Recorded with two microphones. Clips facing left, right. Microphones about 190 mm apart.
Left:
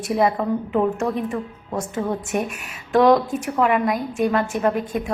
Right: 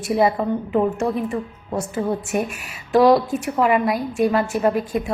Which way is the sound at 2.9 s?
5° right (ahead or behind).